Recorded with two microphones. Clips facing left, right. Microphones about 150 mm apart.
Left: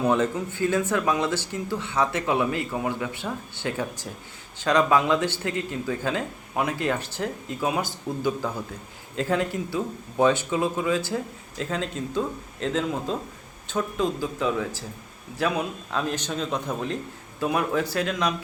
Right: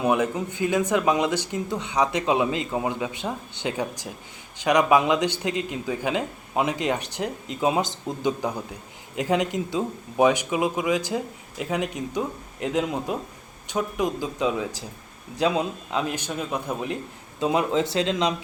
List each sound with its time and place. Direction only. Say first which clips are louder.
0.0 s speech: even; 15° right (ahead or behind)